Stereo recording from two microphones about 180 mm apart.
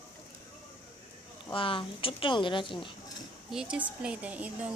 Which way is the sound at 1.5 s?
30° left (ahead or behind).